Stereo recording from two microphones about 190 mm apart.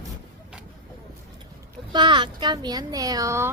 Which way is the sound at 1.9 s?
25° right (ahead or behind).